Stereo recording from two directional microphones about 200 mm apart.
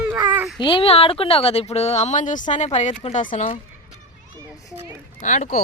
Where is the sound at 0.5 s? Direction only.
25° left (ahead or behind).